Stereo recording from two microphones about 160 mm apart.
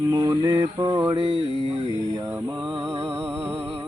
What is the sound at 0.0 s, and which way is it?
Mantra, 25° right (ahead or behind).